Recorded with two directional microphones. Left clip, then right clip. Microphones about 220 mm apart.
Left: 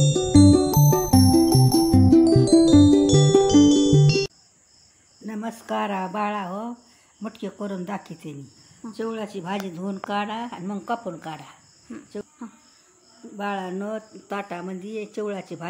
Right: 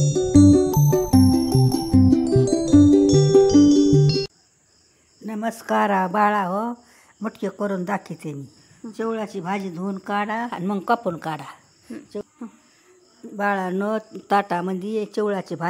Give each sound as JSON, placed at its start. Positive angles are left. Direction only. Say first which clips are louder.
{"t": 0.0, "sound": "music", "louder": "right 1 dB", "side_deg": 0}
{"t": 5.2, "sound": "speech", "louder": "right 6 dB", "side_deg": -30}
{"t": 10.5, "sound": "speech", "louder": "right 7 dB", "side_deg": -40}
{"t": 11.9, "sound": "speech", "louder": "right 3 dB", "side_deg": -10}
{"t": 13.4, "sound": "speech", "louder": "right 6 dB", "side_deg": -40}